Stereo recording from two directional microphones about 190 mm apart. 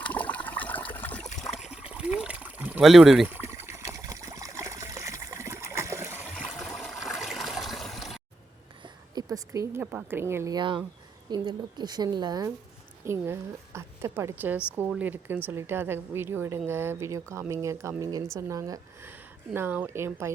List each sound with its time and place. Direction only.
0.0 s water: 10° left (ahead or behind)
1.4 s a sound: centre (ahead or behind)
8.8 s a woman's voice: 20° right (ahead or behind)